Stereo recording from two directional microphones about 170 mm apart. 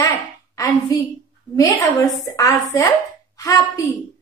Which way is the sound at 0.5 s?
20° left (ahead or behind).